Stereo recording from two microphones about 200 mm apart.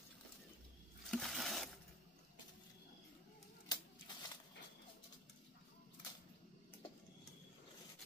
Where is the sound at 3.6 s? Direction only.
20° left (ahead or behind).